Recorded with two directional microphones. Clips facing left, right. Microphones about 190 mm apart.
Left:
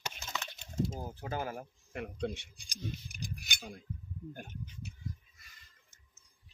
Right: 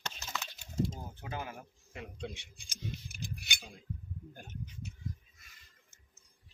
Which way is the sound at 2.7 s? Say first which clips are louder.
Left 2 dB; 40° left (ahead or behind).